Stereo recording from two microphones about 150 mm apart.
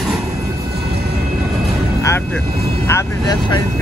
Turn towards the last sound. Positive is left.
turn(degrees=25)  # may be behind; listen again after turning